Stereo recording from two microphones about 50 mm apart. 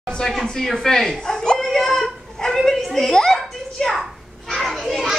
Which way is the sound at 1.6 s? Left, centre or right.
Centre.